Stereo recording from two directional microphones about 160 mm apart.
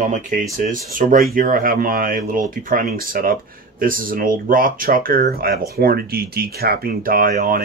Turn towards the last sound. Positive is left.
turn(degrees=-60)  # may be behind; listen again after turning